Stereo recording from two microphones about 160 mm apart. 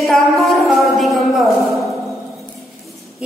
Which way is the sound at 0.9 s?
Centre (ahead or behind).